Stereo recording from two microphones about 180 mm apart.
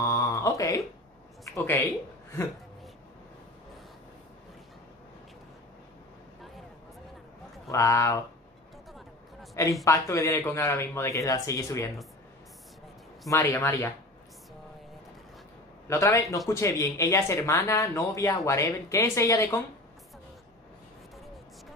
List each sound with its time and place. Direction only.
0.0 s a sound: 20° left (ahead or behind)
1.5 s speech: 10° left (ahead or behind)
7.7 s speech: 15° left (ahead or behind)
8.9 s a sound: centre (ahead or behind)
9.8 s speech: 15° left (ahead or behind)
13.3 s speech: 15° left (ahead or behind)
15.9 s speech: 15° left (ahead or behind)